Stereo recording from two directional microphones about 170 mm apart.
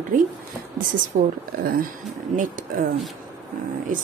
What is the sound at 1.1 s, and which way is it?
A woman's voice, 55° right (ahead or behind).